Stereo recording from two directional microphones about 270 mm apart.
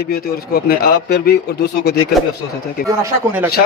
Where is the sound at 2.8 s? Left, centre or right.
Centre.